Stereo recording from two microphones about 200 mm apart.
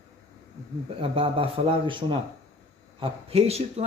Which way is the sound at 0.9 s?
25° right (ahead or behind).